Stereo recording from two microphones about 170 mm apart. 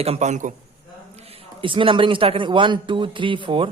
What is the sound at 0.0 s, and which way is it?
A man's voice, 40° right (ahead or behind).